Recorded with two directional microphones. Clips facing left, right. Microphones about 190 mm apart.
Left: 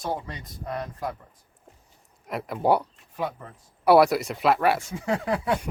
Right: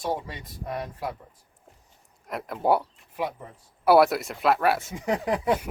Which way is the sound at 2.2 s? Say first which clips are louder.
Left 1 dB; centre (ahead or behind).